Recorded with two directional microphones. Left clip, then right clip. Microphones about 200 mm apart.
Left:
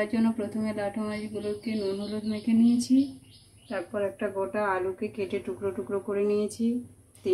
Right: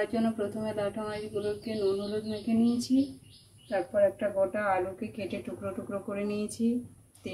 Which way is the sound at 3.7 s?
20° left (ahead or behind).